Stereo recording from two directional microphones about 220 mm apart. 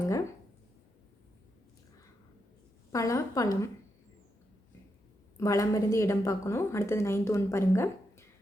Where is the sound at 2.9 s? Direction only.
15° left (ahead or behind).